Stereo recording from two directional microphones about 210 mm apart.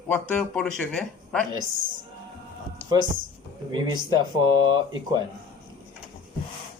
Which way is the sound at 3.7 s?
20° right (ahead or behind).